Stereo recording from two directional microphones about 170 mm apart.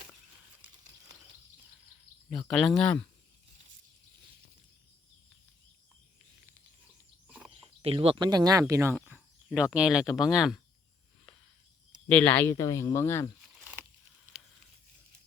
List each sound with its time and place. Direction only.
0.6 s a sound: 10° right (ahead or behind)
2.5 s speech: centre (ahead or behind)
7.5 s speech: 35° right (ahead or behind); by 10.6 s centre (ahead or behind)
12.0 s speech: 10° left (ahead or behind)